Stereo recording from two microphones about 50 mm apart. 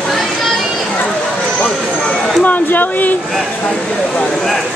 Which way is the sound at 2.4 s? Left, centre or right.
Left.